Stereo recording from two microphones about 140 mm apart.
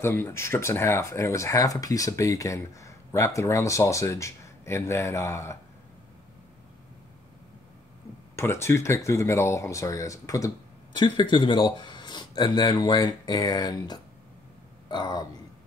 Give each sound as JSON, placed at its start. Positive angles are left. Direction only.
{"t": 0.0, "sound": "speech", "side_deg": 15}
{"t": 8.4, "sound": "speech", "side_deg": 20}